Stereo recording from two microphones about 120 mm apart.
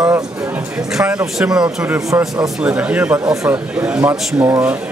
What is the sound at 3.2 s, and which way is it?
Speech, 30° right (ahead or behind).